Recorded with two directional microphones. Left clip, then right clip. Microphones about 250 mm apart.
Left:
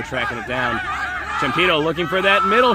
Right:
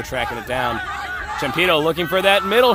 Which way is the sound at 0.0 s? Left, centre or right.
Right.